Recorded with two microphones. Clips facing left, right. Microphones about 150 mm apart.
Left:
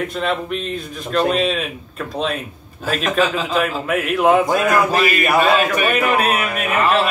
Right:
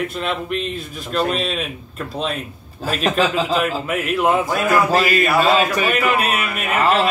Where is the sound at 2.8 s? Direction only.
35° right (ahead or behind).